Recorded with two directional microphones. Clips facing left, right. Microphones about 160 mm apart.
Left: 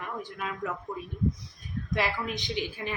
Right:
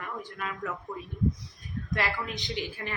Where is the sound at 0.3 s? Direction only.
20° left (ahead or behind).